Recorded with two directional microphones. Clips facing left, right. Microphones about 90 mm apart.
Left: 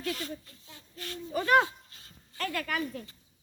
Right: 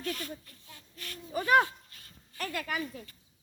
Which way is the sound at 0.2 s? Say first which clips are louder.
Left 2 dB; 25° left (ahead or behind).